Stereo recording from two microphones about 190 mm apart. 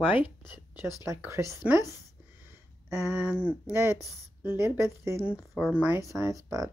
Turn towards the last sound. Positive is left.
turn(degrees=-15)  # may be behind; listen again after turning